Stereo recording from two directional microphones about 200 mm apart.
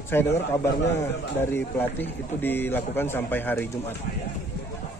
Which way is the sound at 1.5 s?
10° left (ahead or behind).